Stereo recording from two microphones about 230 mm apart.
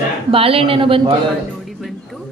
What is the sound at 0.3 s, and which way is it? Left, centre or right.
Speech, right.